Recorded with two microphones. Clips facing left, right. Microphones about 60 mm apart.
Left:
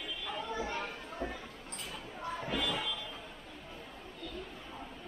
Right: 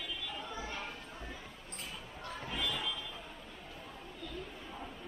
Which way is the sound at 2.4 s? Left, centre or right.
Left.